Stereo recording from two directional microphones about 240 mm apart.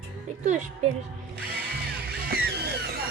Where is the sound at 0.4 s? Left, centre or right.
Right.